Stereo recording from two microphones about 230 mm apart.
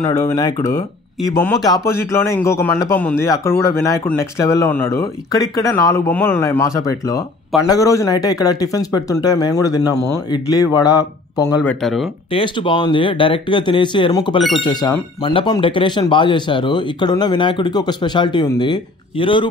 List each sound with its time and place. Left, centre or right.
0.0 s speech: centre
11.8 s speech: centre
12.3 s speech: left